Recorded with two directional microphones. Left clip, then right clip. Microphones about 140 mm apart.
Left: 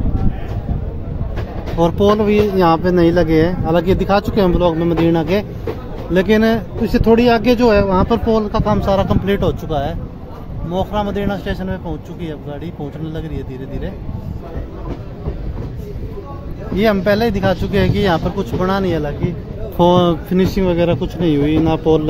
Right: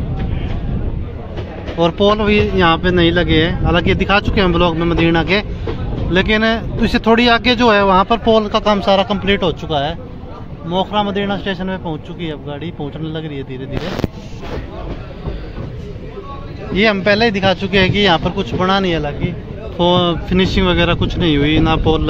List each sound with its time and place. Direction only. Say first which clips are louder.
1.8 s speech: right 1 dB; 35° left (ahead or behind)
2.0 s speech: left 1 dB; 15° left (ahead or behind)
6.8 s speech: even; centre (ahead or behind)
7.8 s speech: right 4 dB; centre (ahead or behind)
8.6 s speech: right 3 dB; 20° left (ahead or behind)
10.7 s speech: right 3 dB; 10° left (ahead or behind)
16.7 s speech: right 1 dB; 20° left (ahead or behind)
19.8 s speech: left 1 dB; 40° left (ahead or behind)
20.2 s speech: right 1 dB; 15° left (ahead or behind)